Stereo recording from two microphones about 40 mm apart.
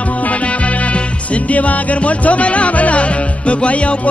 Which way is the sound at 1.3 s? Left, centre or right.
Left.